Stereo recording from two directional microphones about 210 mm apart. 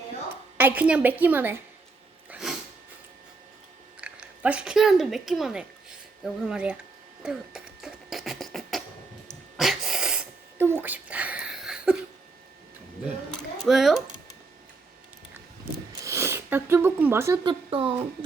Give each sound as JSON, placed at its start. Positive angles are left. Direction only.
{"t": 0.5, "sound": "a woman's voice", "side_deg": -10}
{"t": 2.3, "sound": "sneeze", "side_deg": 0}
{"t": 4.0, "sound": "speech", "side_deg": -5}
{"t": 7.2, "sound": "beatboxing", "side_deg": -5}
{"t": 9.6, "sound": "a sound", "side_deg": 0}
{"t": 13.7, "sound": "speech", "side_deg": 0}
{"t": 15.9, "sound": "a sound", "side_deg": -15}
{"t": 17.4, "sound": "speech", "side_deg": -25}